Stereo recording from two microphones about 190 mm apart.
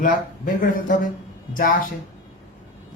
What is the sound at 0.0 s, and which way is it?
Speech, 45° left (ahead or behind).